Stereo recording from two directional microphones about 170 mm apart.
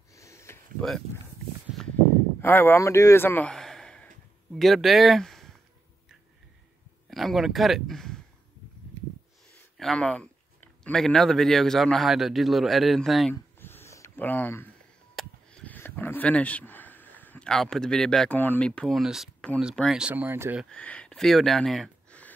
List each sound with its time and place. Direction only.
0.1 s sniff: 15° left (ahead or behind)
0.7 s speech: 5° left (ahead or behind)
2.4 s speech: 10° left (ahead or behind)
7.1 s speech: centre (ahead or behind)
9.8 s speech: 5° left (ahead or behind)
13.3 s a sound: 15° left (ahead or behind)
15.1 s speech: 5° left (ahead or behind); by 20.6 s 15° right (ahead or behind)
20.7 s speech: 5° left (ahead or behind)